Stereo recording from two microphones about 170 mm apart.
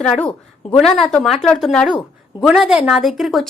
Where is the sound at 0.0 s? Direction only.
5° left (ahead or behind).